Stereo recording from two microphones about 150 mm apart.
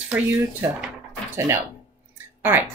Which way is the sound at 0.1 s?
10° right (ahead or behind).